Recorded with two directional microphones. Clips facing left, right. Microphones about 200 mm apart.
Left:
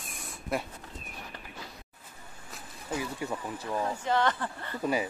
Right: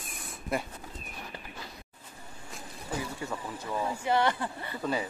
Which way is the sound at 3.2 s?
15° left (ahead or behind).